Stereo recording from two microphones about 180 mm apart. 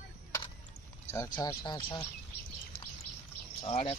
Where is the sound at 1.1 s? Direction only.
20° left (ahead or behind).